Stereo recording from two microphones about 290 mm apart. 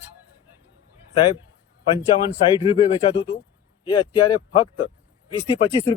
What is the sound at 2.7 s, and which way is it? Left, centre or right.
Speech, centre.